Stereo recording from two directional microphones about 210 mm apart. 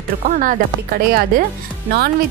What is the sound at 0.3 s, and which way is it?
Speech, 40° right (ahead or behind).